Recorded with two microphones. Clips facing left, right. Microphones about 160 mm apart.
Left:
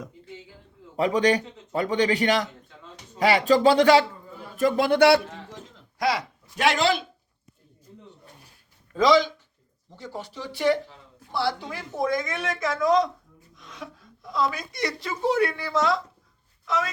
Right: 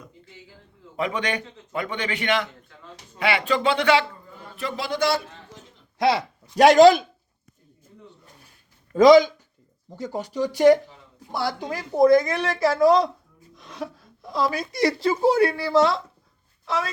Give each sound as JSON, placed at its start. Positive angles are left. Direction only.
{"t": 0.9, "sound": "a man's voice", "side_deg": 35}
{"t": 4.9, "sound": "a man's voice", "side_deg": 65}
{"t": 6.0, "sound": "speech", "side_deg": -25}
{"t": 6.6, "sound": "speech", "side_deg": -40}
{"t": 9.0, "sound": "speech", "side_deg": -45}